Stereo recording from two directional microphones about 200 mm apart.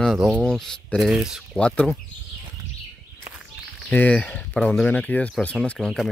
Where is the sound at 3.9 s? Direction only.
5° left (ahead or behind).